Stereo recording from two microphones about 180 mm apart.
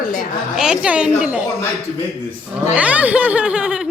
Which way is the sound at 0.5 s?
5° right (ahead or behind).